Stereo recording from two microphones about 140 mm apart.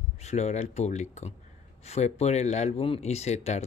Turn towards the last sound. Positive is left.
turn(degrees=55)  # may be behind; listen again after turning